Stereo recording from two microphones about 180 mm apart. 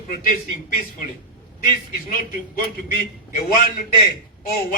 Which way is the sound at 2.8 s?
50° left (ahead or behind).